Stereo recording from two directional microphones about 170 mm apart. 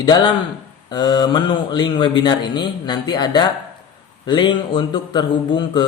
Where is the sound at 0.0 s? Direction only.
25° left (ahead or behind).